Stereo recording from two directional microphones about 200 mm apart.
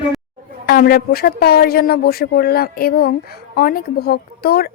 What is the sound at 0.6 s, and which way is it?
A woman's voice, 50° left (ahead or behind).